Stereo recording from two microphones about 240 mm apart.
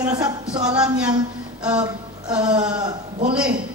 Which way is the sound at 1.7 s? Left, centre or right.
Centre.